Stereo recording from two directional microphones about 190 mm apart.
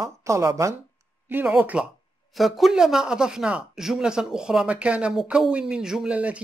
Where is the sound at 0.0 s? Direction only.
15° right (ahead or behind).